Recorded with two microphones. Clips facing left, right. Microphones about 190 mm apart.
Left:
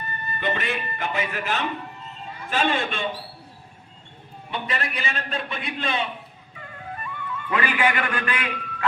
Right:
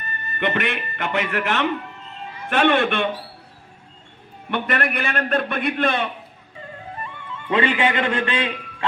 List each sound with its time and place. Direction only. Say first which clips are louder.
0.0 s a man's voice: right 3 dB; 70° right (ahead or behind)
4.5 s a man's voice: right 6 dB; 60° right (ahead or behind)
6.6 s music: right 2 dB; 30° right (ahead or behind)